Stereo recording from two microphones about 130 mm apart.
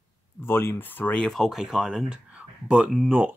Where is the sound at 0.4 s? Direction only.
15° left (ahead or behind).